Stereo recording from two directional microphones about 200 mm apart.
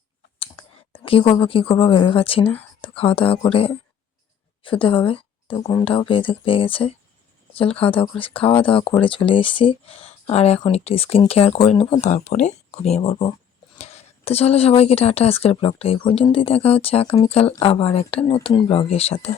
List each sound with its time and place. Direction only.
0.9 s a woman's voice: 25° left (ahead or behind)